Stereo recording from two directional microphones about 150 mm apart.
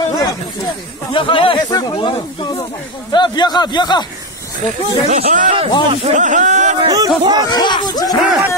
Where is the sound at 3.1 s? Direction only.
30° left (ahead or behind).